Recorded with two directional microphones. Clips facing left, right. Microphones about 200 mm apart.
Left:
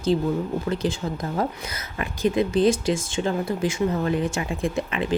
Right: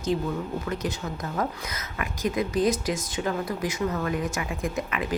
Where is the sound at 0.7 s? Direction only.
30° left (ahead or behind).